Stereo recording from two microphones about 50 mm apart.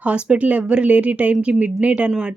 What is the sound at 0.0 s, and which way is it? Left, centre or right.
Speech, right.